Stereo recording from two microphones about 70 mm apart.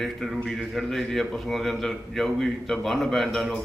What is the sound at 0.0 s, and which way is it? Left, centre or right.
A man's voice, centre.